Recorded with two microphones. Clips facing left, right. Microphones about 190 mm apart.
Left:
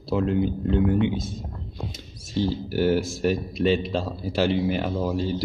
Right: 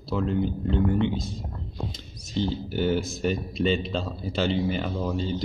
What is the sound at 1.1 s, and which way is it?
Speech, 50° left (ahead or behind).